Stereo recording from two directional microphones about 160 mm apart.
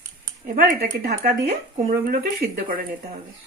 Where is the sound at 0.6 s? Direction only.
70° right (ahead or behind).